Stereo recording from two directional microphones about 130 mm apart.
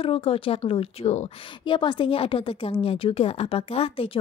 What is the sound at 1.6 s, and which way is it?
A woman's voice, 40° left (ahead or behind).